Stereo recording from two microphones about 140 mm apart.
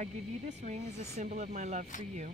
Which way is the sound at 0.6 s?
55° right (ahead or behind).